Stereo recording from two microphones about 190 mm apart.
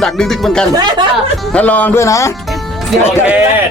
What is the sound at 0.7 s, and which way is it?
Speech, 20° right (ahead or behind).